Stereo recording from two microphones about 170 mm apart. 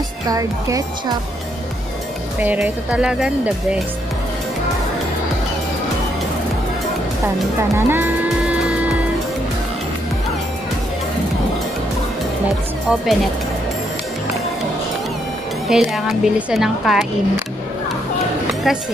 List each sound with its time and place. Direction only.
0.3 s speech: 20° right (ahead or behind)
2.3 s speech: 10° right (ahead or behind)
7.7 s music: 10° right (ahead or behind)
15.7 s a woman's voice: centre (ahead or behind)
18.5 s a sound: centre (ahead or behind)